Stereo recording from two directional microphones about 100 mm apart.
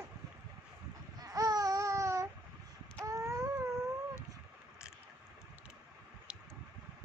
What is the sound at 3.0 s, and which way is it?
Baby cry, 35° right (ahead or behind).